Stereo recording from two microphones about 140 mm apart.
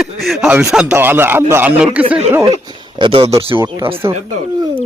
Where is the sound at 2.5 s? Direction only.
30° right (ahead or behind).